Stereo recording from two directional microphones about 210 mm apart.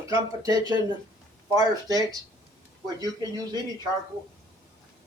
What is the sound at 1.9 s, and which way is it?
Speech, 15° right (ahead or behind).